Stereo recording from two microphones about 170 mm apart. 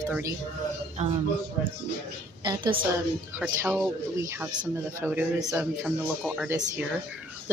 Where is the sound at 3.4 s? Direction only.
10° right (ahead or behind).